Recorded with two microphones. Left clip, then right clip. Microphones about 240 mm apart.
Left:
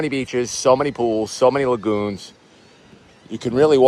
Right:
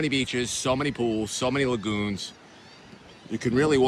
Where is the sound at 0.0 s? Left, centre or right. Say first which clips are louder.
Left 4 dB; centre.